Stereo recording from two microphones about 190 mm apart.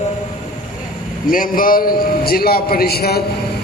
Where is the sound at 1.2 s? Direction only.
45° left (ahead or behind).